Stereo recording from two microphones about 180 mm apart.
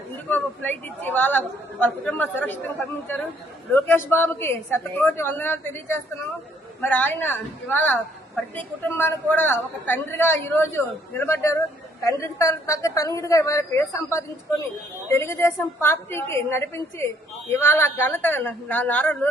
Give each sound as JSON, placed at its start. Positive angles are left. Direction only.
{"t": 0.3, "sound": "a man's voice", "side_deg": 10}